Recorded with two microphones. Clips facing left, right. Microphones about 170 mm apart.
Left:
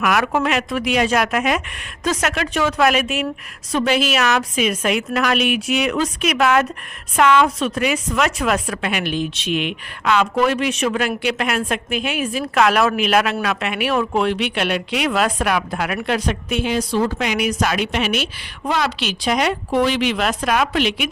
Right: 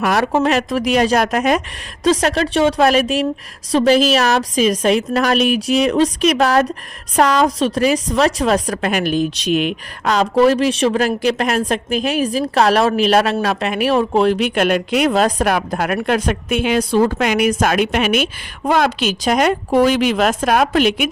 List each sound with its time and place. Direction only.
0.0 s a woman's voice: 30° right (ahead or behind)
0.5 s a woman's voice: 40° right (ahead or behind)